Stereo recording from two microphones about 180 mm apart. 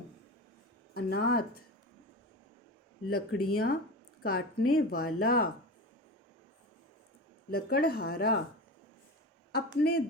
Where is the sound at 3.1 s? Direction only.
55° left (ahead or behind).